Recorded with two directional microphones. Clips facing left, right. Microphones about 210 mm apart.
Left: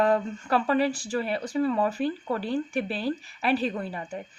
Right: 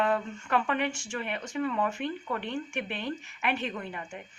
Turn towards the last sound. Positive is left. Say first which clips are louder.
# left 5 dB
turn(degrees=35)  # may be behind; listen again after turning